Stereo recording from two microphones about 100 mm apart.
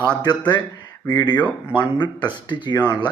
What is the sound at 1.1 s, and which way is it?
Speech, 50° left (ahead or behind).